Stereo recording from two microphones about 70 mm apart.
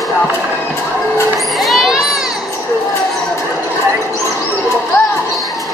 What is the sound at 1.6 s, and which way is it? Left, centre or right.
Children playing, centre.